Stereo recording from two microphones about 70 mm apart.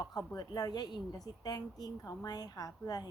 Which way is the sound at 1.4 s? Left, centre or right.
Left.